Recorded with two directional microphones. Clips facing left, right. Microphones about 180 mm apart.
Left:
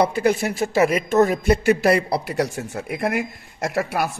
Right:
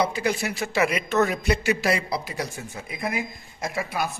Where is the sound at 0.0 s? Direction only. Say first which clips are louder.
Left 6 dB; 55° left (ahead or behind).